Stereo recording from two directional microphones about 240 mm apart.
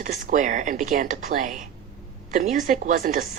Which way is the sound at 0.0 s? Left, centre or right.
Right.